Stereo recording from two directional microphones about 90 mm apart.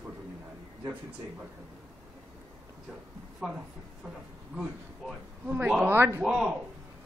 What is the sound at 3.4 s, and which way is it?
Speech, 10° right (ahead or behind).